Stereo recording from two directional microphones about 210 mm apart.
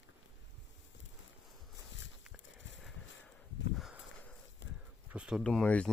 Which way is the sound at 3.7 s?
Centre (ahead or behind).